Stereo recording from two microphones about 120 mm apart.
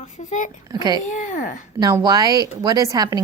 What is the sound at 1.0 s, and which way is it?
Speech, 90° left.